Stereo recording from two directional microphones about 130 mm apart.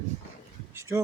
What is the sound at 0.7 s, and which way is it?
Speech, 25° right (ahead or behind).